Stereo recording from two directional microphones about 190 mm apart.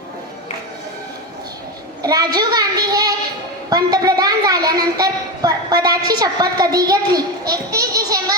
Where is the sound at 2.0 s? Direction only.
20° right (ahead or behind).